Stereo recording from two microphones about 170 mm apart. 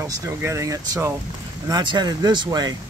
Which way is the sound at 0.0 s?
15° right (ahead or behind).